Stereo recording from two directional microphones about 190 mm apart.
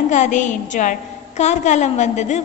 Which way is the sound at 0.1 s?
40° left (ahead or behind).